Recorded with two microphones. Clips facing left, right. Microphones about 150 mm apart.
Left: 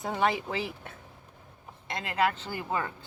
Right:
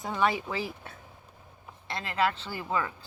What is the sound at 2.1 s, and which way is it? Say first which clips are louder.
Speech: left 1 dB; 50° left (ahead or behind).